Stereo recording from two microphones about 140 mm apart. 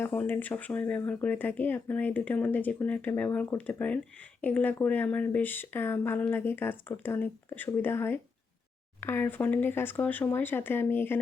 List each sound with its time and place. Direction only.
0.0 s speech: 15° left (ahead or behind)